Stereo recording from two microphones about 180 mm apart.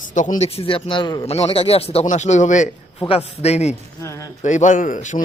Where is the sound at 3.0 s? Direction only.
30° left (ahead or behind).